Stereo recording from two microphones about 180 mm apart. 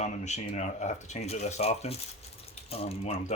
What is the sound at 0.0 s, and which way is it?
Speech, 40° left (ahead or behind).